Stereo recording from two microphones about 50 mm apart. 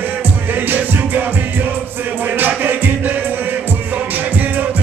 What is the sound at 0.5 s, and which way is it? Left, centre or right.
Music, right.